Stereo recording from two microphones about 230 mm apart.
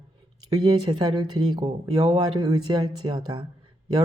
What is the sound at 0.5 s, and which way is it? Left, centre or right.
Speech, centre.